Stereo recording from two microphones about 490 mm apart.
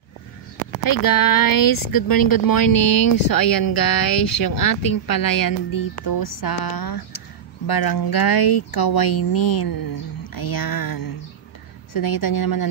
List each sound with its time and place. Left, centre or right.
0.8 s a woman's voice: left